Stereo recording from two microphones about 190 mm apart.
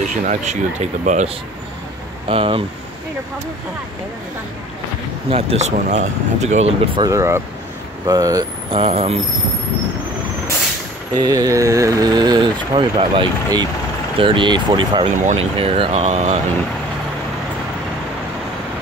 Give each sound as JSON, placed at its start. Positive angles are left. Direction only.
{"t": 0.1, "sound": "speech", "side_deg": -40}
{"t": 5.3, "sound": "speech", "side_deg": -35}
{"t": 7.0, "sound": "speech", "side_deg": -15}
{"t": 8.6, "sound": "speech", "side_deg": -30}
{"t": 11.1, "sound": "speech", "side_deg": -20}
{"t": 15.1, "sound": "speech", "side_deg": -35}